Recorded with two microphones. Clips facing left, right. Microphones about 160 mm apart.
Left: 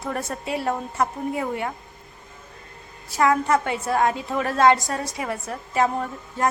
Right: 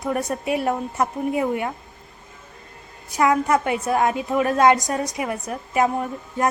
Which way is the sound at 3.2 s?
20° right (ahead or behind).